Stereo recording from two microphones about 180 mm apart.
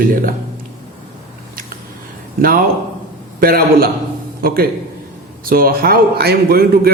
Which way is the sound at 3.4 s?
55° right (ahead or behind).